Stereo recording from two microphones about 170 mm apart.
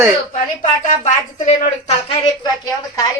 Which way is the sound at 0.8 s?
45° left (ahead or behind).